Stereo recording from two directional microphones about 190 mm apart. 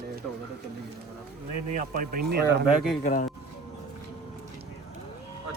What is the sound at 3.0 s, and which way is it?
Speech, 45° left (ahead or behind).